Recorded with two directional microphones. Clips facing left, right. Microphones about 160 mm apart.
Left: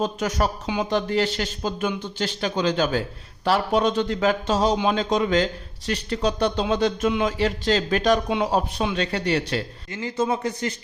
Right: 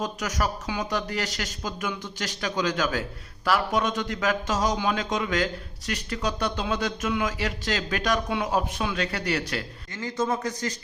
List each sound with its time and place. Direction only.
0.0 s speech: 30° left (ahead or behind)